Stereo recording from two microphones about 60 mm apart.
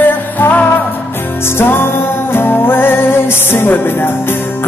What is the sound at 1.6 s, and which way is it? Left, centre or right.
Music, left.